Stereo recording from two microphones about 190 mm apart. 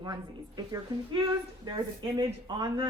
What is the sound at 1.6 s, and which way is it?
A woman's voice, 20° right (ahead or behind).